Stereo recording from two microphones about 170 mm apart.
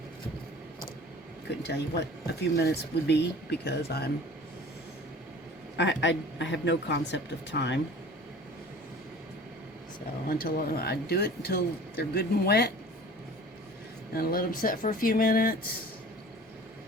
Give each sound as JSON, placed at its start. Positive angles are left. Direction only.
{"t": 1.5, "sound": "speech", "side_deg": 80}
{"t": 5.7, "sound": "speech", "side_deg": 90}
{"t": 10.2, "sound": "speech", "side_deg": 60}
{"t": 14.1, "sound": "speech", "side_deg": 60}